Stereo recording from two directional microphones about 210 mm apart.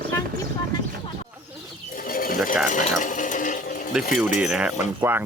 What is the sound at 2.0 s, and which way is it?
Bird, 40° left (ahead or behind).